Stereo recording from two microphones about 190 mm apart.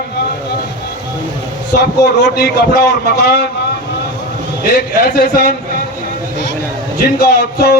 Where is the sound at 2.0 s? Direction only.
60° left (ahead or behind).